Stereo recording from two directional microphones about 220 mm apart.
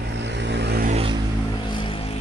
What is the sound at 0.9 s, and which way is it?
Vehicle, 25° right (ahead or behind).